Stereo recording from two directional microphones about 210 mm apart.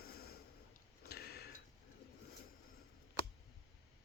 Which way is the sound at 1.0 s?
50° left (ahead or behind).